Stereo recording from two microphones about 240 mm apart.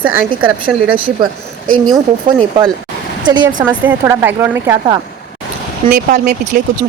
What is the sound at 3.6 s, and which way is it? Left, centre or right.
Speech, centre.